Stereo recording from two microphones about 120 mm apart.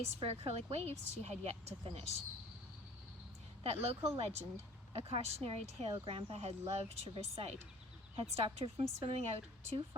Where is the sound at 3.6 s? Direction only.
55° right (ahead or behind).